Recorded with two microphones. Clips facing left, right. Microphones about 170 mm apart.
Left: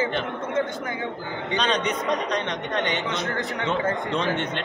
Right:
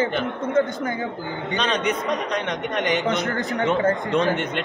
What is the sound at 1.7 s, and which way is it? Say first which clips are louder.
Speech: right 2 dB; 5° right (ahead or behind).